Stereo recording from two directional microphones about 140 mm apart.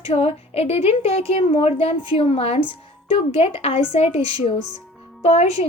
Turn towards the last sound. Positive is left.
turn(degrees=50)  # may be behind; listen again after turning